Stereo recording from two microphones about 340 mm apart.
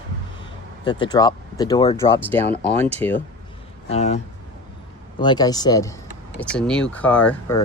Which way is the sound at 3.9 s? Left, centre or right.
Centre.